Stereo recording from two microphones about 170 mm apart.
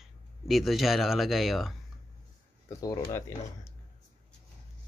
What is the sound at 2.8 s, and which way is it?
Speech, 20° left (ahead or behind).